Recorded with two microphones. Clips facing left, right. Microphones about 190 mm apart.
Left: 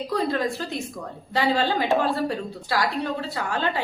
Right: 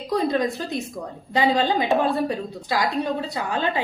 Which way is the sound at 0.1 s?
15° right (ahead or behind).